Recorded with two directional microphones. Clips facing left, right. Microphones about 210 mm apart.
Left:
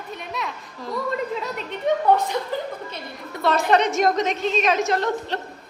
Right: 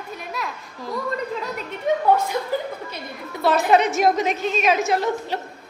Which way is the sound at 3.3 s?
5° right (ahead or behind).